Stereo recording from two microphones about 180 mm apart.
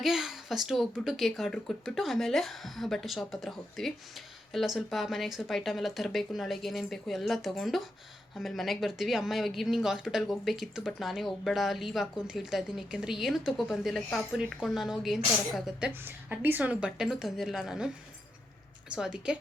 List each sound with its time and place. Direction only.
0.0 s speech: centre (ahead or behind)